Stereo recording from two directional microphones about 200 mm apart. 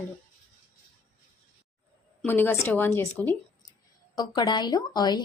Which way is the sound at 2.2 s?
10° left (ahead or behind).